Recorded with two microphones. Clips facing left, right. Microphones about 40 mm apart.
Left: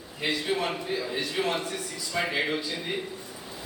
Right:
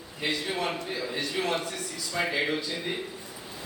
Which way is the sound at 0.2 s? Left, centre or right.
Centre.